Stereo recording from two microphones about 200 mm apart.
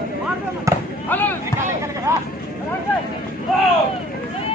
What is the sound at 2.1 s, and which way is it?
Speech, 15° right (ahead or behind).